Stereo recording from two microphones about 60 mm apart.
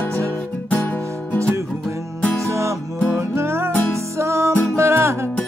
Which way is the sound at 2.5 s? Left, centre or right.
Right.